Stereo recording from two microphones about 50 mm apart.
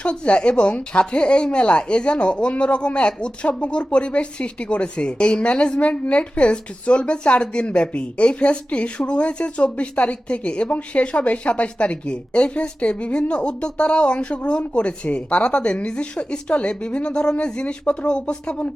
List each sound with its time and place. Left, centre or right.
0.0 s speech: left